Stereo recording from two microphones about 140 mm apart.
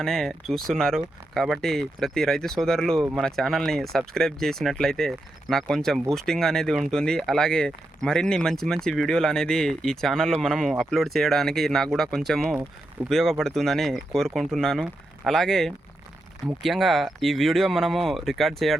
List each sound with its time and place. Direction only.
0.0 s speech: 5° left (ahead or behind)